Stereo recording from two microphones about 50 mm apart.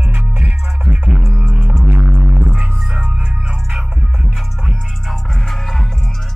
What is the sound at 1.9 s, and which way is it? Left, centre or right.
Music, right.